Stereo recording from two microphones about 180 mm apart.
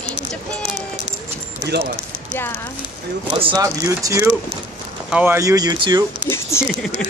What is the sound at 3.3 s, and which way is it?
Speech, 30° right (ahead or behind).